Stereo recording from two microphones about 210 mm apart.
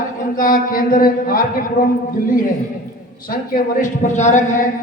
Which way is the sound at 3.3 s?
40° left (ahead or behind).